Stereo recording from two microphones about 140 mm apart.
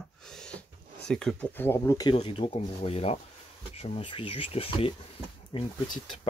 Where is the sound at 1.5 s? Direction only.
15° left (ahead or behind).